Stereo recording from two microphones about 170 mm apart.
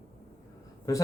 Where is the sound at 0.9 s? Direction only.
20° left (ahead or behind).